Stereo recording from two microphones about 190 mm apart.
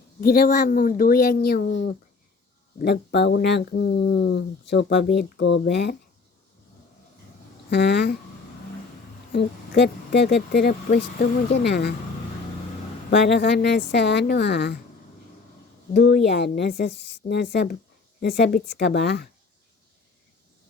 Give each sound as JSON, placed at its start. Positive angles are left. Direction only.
{"t": 0.2, "sound": "speech", "side_deg": 50}
{"t": 7.7, "sound": "speech", "side_deg": 60}
{"t": 9.3, "sound": "speech", "side_deg": 60}
{"t": 13.1, "sound": "speech", "side_deg": 60}
{"t": 15.9, "sound": "speech", "side_deg": 55}